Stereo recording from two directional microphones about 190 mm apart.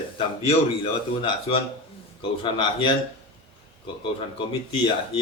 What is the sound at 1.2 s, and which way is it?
Speech, 30° left (ahead or behind).